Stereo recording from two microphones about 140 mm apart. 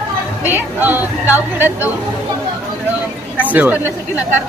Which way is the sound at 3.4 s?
10° right (ahead or behind).